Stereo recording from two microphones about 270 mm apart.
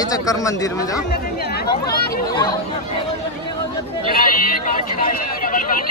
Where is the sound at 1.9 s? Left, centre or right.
Left.